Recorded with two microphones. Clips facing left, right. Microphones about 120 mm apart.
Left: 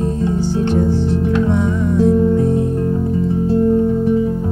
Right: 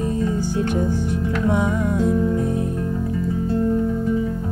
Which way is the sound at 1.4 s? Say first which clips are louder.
Left 3 dB; 10° right (ahead or behind).